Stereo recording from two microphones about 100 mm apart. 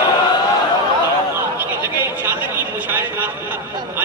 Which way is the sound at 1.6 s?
20° right (ahead or behind).